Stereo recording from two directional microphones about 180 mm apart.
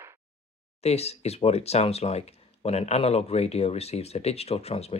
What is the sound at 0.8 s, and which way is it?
Speech, 35° left (ahead or behind).